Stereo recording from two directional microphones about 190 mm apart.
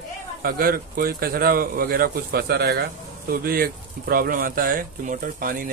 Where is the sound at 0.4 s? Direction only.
50° right (ahead or behind).